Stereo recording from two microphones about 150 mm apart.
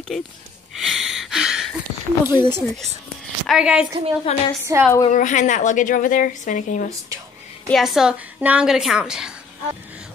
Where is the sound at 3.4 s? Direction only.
5° right (ahead or behind).